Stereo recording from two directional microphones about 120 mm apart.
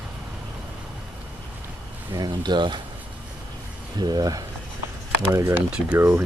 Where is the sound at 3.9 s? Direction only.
35° right (ahead or behind).